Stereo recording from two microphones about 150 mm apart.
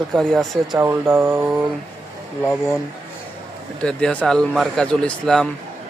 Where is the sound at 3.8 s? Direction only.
5° left (ahead or behind).